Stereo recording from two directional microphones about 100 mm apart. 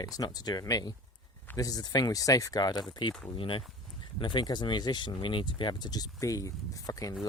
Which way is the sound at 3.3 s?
60° left (ahead or behind).